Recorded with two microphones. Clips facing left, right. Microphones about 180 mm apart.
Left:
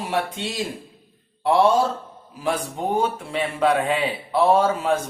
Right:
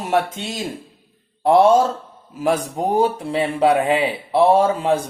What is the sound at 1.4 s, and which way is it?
A man's voice, 45° right (ahead or behind).